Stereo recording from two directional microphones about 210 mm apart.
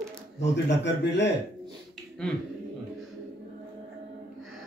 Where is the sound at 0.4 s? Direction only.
55° left (ahead or behind).